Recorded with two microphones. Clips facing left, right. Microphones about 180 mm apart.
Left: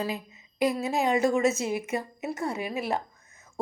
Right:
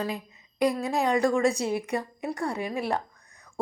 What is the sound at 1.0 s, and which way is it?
Speech, 20° left (ahead or behind).